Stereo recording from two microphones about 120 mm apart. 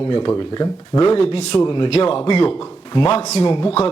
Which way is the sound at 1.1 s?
50° left (ahead or behind).